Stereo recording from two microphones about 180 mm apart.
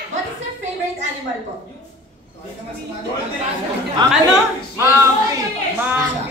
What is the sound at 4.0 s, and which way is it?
Speech, 25° right (ahead or behind).